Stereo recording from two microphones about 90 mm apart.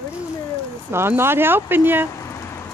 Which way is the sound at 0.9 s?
25° right (ahead or behind).